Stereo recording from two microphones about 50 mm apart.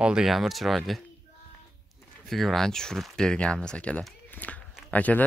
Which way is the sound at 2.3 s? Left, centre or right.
Centre.